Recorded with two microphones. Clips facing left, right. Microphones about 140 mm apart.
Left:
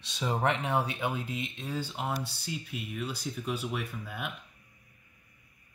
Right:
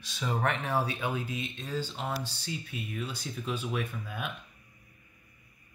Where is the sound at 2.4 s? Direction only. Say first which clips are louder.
Even; 5° left (ahead or behind).